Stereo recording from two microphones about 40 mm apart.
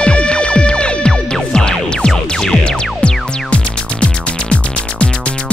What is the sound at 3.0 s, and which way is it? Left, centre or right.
Music, left.